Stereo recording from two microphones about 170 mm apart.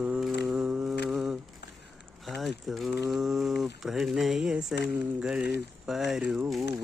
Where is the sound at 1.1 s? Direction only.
5° right (ahead or behind).